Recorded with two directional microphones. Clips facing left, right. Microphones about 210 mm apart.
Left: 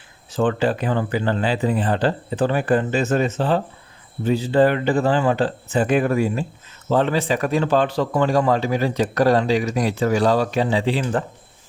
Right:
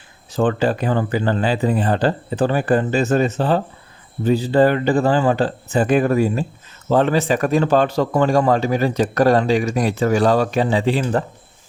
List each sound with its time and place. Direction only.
0.3 s a man's voice: 40° right (ahead or behind)